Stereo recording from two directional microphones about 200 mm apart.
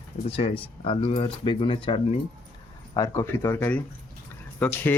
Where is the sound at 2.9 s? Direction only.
15° left (ahead or behind).